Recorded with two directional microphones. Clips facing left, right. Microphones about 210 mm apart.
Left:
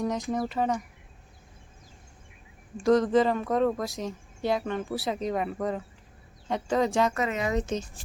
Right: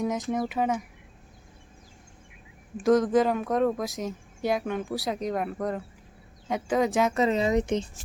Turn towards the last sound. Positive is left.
turn(degrees=-15)  # may be behind; listen again after turning